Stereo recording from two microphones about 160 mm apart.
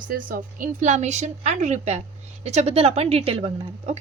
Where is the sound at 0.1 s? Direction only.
60° right (ahead or behind).